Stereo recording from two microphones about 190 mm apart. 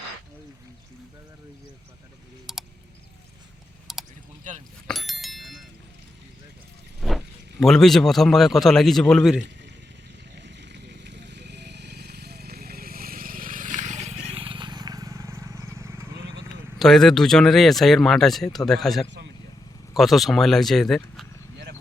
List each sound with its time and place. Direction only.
2.5 s a sound: centre (ahead or behind)
3.9 s a sound: centre (ahead or behind)
4.9 s bicycle bell: centre (ahead or behind)
7.0 s speech: centre (ahead or behind)
10.3 s vehicle: 65° right (ahead or behind); by 16.0 s 15° right (ahead or behind)
16.7 s speech: centre (ahead or behind)